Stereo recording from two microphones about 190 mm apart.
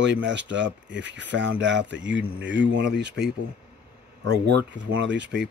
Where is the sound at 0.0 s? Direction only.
70° right (ahead or behind).